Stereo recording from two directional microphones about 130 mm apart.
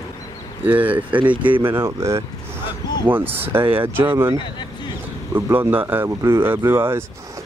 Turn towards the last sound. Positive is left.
turn(degrees=-20)  # may be behind; listen again after turning